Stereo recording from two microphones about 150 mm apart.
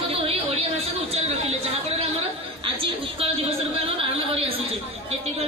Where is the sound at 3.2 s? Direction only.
40° right (ahead or behind).